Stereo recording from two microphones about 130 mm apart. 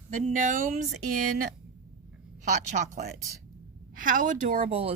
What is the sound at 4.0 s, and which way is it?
Speech, 90° right.